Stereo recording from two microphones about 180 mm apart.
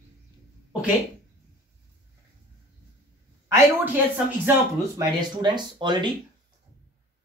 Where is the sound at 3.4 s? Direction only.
15° right (ahead or behind).